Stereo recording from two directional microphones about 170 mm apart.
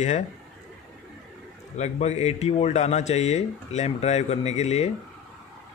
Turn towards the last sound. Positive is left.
turn(degrees=40)  # may be behind; listen again after turning